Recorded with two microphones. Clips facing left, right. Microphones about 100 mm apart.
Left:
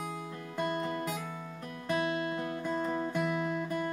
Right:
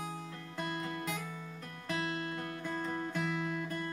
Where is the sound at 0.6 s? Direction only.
40° left (ahead or behind).